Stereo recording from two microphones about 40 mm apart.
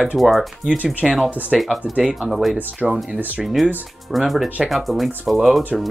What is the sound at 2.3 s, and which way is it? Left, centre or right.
Speech, centre.